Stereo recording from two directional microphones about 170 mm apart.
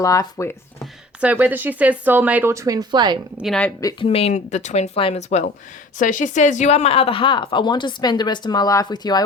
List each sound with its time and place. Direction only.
0.0 s speech: 20° left (ahead or behind)
1.2 s speech: 10° right (ahead or behind); by 3.2 s 25° right (ahead or behind)
3.4 s speech: 5° left (ahead or behind)
4.0 s speech: 35° left (ahead or behind)